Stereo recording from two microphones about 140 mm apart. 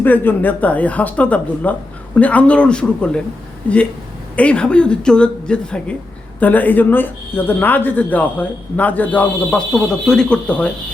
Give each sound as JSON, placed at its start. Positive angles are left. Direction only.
{"t": 0.0, "sound": "speech", "side_deg": 15}
{"t": 4.4, "sound": "speech", "side_deg": 10}